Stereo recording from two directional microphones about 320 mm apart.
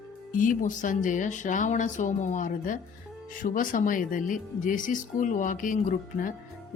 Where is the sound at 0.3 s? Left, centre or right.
Left.